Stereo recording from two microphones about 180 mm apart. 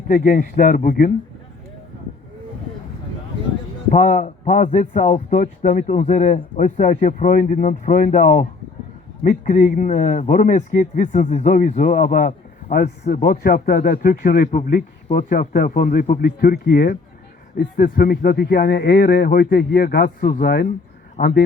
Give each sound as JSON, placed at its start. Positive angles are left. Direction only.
{"t": 0.1, "sound": "a man's voice", "side_deg": 50}
{"t": 3.9, "sound": "a man's voice", "side_deg": 40}